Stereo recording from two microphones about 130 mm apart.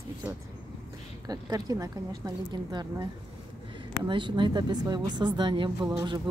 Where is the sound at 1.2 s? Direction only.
30° right (ahead or behind).